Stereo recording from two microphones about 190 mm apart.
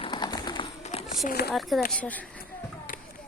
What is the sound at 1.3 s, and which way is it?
Speech, 55° left (ahead or behind).